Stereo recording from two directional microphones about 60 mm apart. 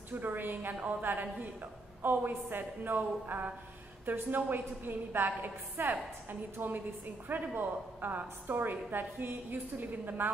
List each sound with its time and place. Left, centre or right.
0.1 s a woman's voice: right